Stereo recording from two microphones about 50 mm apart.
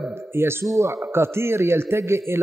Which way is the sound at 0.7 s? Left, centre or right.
Right.